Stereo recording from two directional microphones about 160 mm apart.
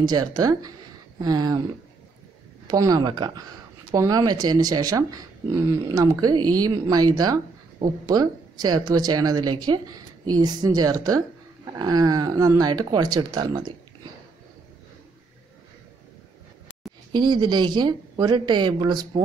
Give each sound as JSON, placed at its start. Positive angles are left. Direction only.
{"t": 0.0, "sound": "speech", "side_deg": -25}
{"t": 2.7, "sound": "speech", "side_deg": -25}
{"t": 17.1, "sound": "speech", "side_deg": -25}